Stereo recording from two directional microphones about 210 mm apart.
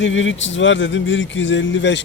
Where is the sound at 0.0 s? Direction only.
60° left (ahead or behind).